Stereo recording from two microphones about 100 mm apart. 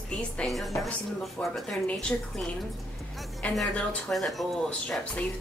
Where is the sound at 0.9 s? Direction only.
10° left (ahead or behind).